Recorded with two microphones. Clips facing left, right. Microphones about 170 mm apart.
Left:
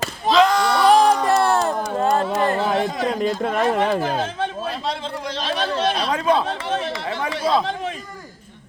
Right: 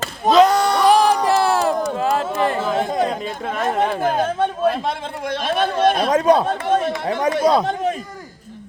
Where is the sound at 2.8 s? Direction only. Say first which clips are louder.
Right 1 dB; 50° right (ahead or behind).